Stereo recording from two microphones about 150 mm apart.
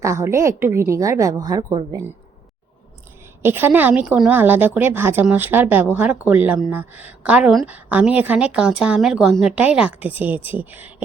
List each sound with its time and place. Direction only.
0.0 s a woman's voice: 20° right (ahead or behind)
3.4 s a woman's voice: 15° right (ahead or behind)